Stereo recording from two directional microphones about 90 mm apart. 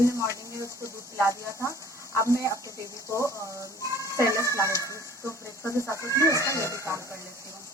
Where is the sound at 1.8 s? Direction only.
35° left (ahead or behind).